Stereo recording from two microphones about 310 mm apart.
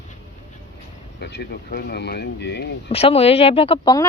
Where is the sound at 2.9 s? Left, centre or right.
Centre.